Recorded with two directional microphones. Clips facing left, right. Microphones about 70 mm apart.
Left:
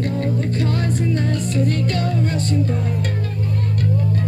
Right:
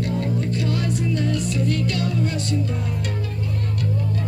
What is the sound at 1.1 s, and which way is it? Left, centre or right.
Music, left.